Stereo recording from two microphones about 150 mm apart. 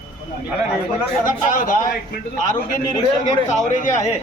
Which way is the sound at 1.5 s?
65° left (ahead or behind).